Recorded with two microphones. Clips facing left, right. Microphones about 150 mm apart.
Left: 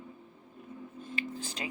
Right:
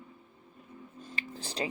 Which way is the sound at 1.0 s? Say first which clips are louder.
Left 4 dB; 35° right (ahead or behind).